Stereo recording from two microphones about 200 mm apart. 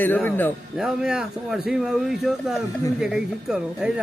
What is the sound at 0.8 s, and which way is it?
A man's voice, 5° right (ahead or behind).